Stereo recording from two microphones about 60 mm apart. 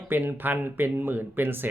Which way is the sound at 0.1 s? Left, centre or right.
Right.